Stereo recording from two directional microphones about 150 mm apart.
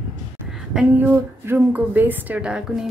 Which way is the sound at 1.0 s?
15° right (ahead or behind).